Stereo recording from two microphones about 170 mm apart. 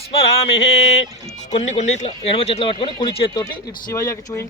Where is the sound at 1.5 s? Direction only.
45° left (ahead or behind).